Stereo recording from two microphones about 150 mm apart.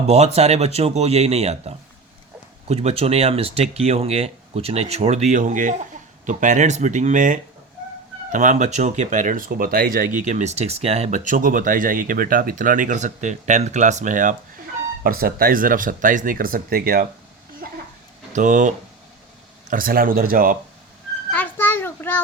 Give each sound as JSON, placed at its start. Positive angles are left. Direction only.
{"t": 0.1, "sound": "speech", "side_deg": -45}
{"t": 10.2, "sound": "speech", "side_deg": -50}
{"t": 15.0, "sound": "speech", "side_deg": -80}
{"t": 18.3, "sound": "speech", "side_deg": -55}
{"t": 19.7, "sound": "speech", "side_deg": -70}
{"t": 21.2, "sound": "a sound", "side_deg": 10}